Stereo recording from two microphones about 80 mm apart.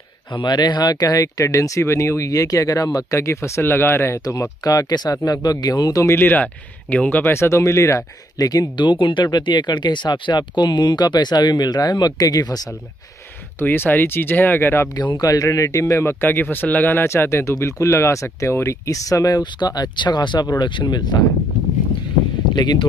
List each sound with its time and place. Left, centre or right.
0.3 s speech: left
0.9 s speech: left
4.2 s speech: left
6.1 s speech: left
7.2 s speech: left
8.4 s speech: left
13.6 s speech: left
15.1 s speech: left
22.5 s speech: left